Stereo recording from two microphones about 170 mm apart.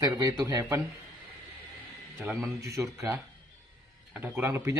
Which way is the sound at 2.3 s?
20° right (ahead or behind).